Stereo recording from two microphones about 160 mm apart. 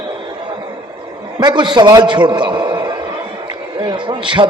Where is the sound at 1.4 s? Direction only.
30° right (ahead or behind).